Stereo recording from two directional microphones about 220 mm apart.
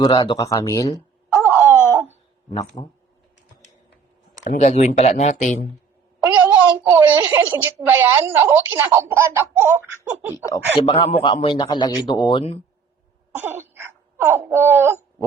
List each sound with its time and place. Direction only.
0.0 s speech: 20° left (ahead or behind)
1.3 s wail: 10° right (ahead or behind)
1.7 s wail: 10° left (ahead or behind)
2.8 s a man's voice: 20° left (ahead or behind)
4.4 s speech: 35° left (ahead or behind)
6.2 s a child's voice: 10° right (ahead or behind)
10.4 s a man's voice: 20° left (ahead or behind)
13.3 s a sound: 10° right (ahead or behind)